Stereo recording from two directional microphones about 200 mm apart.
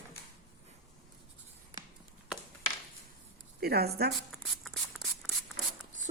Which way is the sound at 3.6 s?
50° right (ahead or behind).